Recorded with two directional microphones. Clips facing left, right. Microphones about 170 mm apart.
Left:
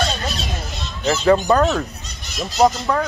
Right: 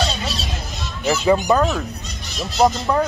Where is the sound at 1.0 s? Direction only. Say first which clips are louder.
Left 1 dB; 10° right (ahead or behind).